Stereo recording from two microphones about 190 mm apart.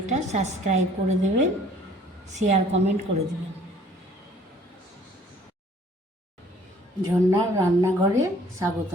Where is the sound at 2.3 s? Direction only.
40° right (ahead or behind).